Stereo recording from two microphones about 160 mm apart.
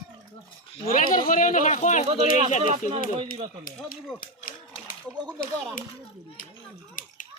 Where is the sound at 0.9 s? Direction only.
60° left (ahead or behind).